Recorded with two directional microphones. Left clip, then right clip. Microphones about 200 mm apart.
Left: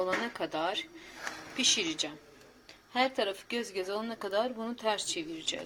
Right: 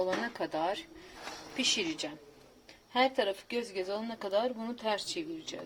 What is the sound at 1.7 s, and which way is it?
A woman's voice, 15° right (ahead or behind).